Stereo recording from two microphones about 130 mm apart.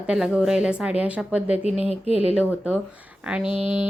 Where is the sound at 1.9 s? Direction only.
50° left (ahead or behind).